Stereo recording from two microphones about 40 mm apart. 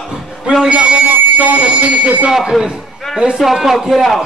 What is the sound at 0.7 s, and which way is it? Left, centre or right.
A man's voice, right.